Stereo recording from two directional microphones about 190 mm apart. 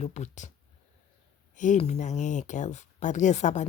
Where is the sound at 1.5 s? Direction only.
40° left (ahead or behind).